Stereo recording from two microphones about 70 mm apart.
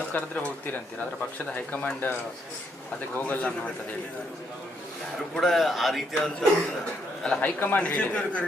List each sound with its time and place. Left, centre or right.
0.1 s speech: left
3.2 s speech: left
5.3 s a man's voice: centre
7.4 s speech: left